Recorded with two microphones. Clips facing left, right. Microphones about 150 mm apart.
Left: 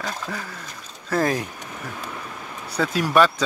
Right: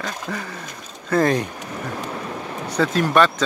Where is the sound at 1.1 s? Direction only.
Centre (ahead or behind).